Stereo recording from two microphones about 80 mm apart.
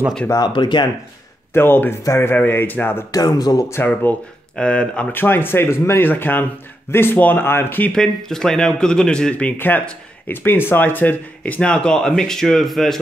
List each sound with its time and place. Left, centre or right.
0.5 s speech: left
1.5 s speech: left
3.1 s speech: left
3.8 s speech: left
4.6 s speech: centre
5.1 s speech: left
7.9 s speech: centre
9.6 s speech: left; by 13.0 s centre